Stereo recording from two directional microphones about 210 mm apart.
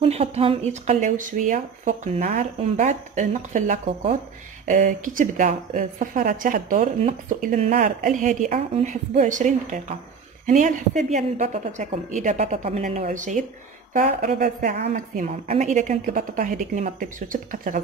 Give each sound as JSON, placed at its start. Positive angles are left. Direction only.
{"t": 0.0, "sound": "a woman's voice", "side_deg": -30}
{"t": 14.9, "sound": "speech", "side_deg": -35}